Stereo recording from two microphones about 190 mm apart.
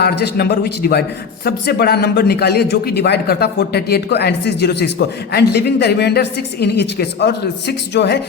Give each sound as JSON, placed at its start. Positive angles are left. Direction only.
{"t": 0.0, "sound": "a man's voice", "side_deg": 60}